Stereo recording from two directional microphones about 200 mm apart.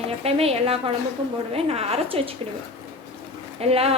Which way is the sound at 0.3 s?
30° right (ahead or behind).